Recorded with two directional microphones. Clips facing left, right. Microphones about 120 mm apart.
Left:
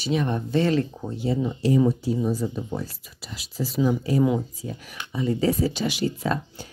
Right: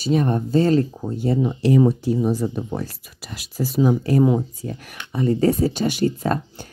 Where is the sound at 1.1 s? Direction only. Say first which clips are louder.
Right 4 dB; 50° right (ahead or behind).